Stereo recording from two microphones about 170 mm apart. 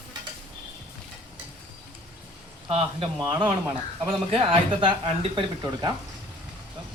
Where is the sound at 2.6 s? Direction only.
35° right (ahead or behind).